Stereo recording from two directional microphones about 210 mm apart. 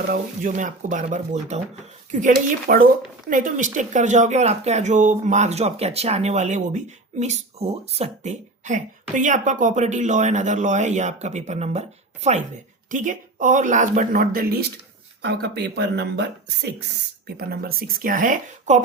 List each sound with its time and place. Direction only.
0.1 s speech: 40° right (ahead or behind)
15.2 s speech: 55° right (ahead or behind); by 18.8 s 35° right (ahead or behind)